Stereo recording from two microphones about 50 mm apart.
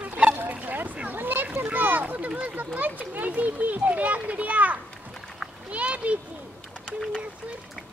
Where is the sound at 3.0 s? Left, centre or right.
Right.